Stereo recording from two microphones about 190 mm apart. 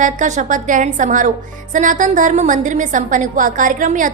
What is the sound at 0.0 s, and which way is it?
A woman's voice, 40° right (ahead or behind).